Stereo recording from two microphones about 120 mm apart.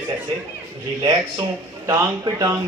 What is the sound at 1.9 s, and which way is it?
Speech, 25° right (ahead or behind).